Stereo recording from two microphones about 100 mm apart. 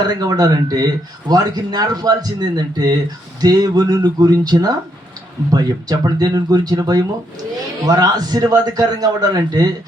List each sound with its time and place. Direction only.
0.0 s speech: 40° right (ahead or behind)